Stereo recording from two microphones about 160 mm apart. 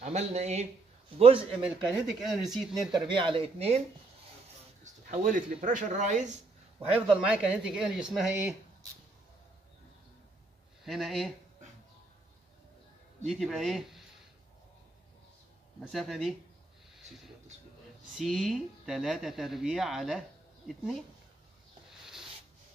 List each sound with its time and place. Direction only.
0.0 s speech: 45° right (ahead or behind)
1.6 s speech: centre (ahead or behind)
3.2 s speech: 35° right (ahead or behind)
4.8 s speech: 50° right (ahead or behind)
7.3 s speech: 5° right (ahead or behind)
10.8 s speech: centre (ahead or behind)
13.3 s speech: centre (ahead or behind)
15.9 s speech: centre (ahead or behind)
18.1 s speech: centre (ahead or behind)